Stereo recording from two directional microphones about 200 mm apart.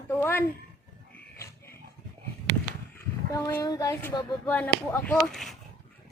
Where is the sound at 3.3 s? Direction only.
15° left (ahead or behind).